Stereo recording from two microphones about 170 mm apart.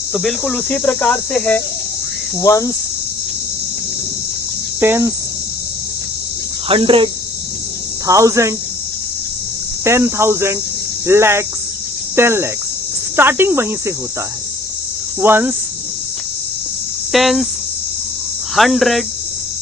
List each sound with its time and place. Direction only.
0.1 s cricket: centre (ahead or behind)
2.4 s cricket: 20° left (ahead or behind)
4.8 s cricket: 15° right (ahead or behind)
6.7 s cricket: 30° right (ahead or behind)
8.0 s cricket: 20° right (ahead or behind)
9.8 s cricket: 15° right (ahead or behind)
15.2 s cricket: 10° right (ahead or behind)
17.1 s cricket: centre (ahead or behind)
18.5 s cricket: centre (ahead or behind)